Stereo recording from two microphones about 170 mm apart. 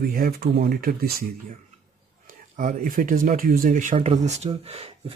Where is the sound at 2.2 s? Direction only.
45° right (ahead or behind).